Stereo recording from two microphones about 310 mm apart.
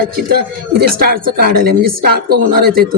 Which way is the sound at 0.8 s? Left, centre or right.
Right.